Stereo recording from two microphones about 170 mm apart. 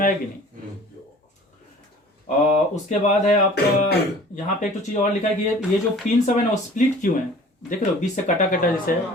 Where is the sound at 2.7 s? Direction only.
45° left (ahead or behind).